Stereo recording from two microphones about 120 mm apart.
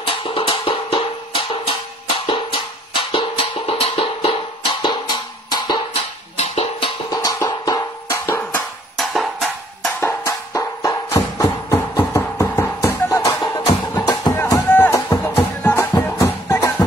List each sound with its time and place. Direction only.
0.0 s music: 45° left (ahead or behind)
6.3 s music: 70° left (ahead or behind)
7.1 s music: 30° left (ahead or behind)
8.9 s music: centre (ahead or behind)
9.9 s music: 20° left (ahead or behind)
14.3 s music: 20° left (ahead or behind)
15.9 s music: 25° left (ahead or behind)